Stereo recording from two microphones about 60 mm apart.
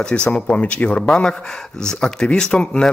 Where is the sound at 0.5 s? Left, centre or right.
Left.